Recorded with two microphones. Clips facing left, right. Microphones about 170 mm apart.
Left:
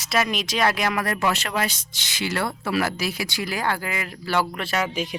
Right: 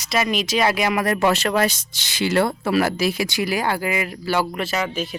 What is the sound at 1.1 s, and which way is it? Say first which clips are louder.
Speech: right 5 dB; 30° right (ahead or behind).